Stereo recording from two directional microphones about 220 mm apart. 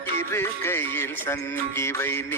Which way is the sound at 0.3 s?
10° left (ahead or behind).